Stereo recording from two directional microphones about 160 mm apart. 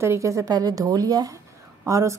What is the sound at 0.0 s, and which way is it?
A woman's voice, 20° right (ahead or behind).